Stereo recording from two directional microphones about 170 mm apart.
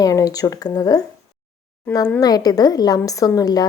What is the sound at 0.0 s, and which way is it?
Speech, 20° left (ahead or behind).